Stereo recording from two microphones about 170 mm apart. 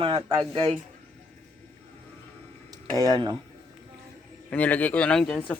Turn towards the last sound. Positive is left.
turn(degrees=5)  # may be behind; listen again after turning